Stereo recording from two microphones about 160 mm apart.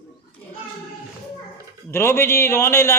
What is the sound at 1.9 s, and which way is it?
A man's voice, 15° left (ahead or behind).